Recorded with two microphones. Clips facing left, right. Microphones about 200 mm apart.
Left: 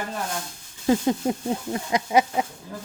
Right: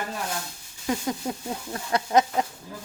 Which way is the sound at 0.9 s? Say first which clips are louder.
Left 7 dB; 25° left (ahead or behind).